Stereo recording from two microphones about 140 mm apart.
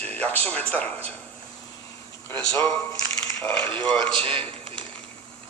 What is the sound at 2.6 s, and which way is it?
Speech, 20° left (ahead or behind).